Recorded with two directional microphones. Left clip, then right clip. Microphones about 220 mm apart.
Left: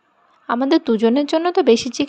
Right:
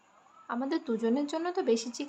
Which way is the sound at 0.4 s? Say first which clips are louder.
Left 16 dB; 40° left (ahead or behind).